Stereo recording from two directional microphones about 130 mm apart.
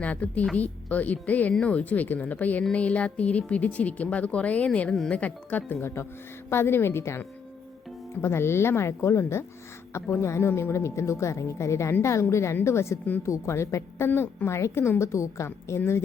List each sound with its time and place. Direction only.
0.0 s a woman's voice: 10° left (ahead or behind)